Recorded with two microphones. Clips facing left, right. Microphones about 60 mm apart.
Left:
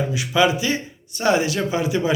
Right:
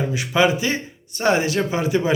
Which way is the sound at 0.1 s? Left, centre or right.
Right.